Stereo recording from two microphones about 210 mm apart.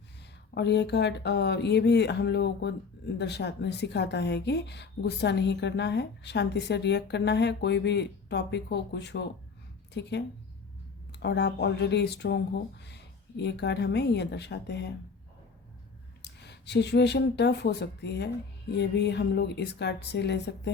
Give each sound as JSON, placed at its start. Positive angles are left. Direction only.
{"t": 0.5, "sound": "a woman's voice", "side_deg": 55}
{"t": 16.2, "sound": "a woman's voice", "side_deg": 55}